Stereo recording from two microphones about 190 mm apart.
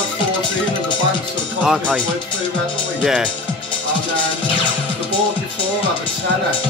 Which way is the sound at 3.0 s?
5° right (ahead or behind).